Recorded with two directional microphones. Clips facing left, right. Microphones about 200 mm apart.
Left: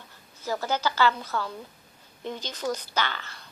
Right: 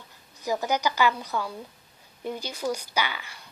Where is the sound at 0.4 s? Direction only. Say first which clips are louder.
Right 2 dB; 15° right (ahead or behind).